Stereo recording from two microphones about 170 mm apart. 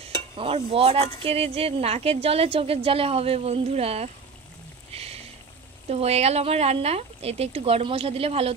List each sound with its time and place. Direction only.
0.4 s a woman's voice: 35° right (ahead or behind)
5.9 s a woman's voice: 40° right (ahead or behind)